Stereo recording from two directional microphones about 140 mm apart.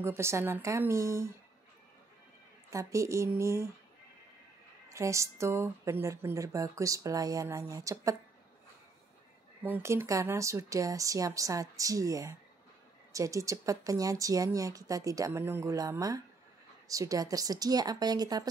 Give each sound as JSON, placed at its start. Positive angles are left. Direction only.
{"t": 0.0, "sound": "a woman's voice", "side_deg": -20}
{"t": 2.7, "sound": "a woman's voice", "side_deg": -20}
{"t": 4.8, "sound": "a woman's voice", "side_deg": -20}
{"t": 9.6, "sound": "a woman's voice", "side_deg": -15}